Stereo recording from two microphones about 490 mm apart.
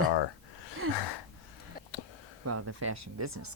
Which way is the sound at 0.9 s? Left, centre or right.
Left.